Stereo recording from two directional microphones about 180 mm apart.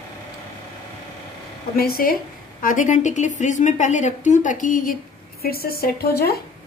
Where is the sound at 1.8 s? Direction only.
55° left (ahead or behind).